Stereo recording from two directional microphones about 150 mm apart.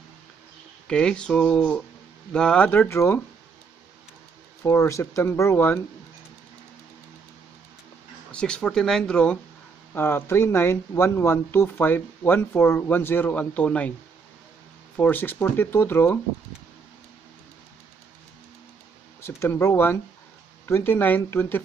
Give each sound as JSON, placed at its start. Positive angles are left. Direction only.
{"t": 0.8, "sound": "speech", "side_deg": 5}
{"t": 4.6, "sound": "speech", "side_deg": 20}
{"t": 8.3, "sound": "speech", "side_deg": 5}
{"t": 15.0, "sound": "speech", "side_deg": 10}
{"t": 19.2, "sound": "speech", "side_deg": 15}